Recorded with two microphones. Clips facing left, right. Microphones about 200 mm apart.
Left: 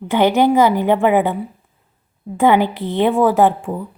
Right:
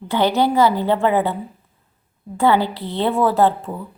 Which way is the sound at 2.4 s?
15° left (ahead or behind).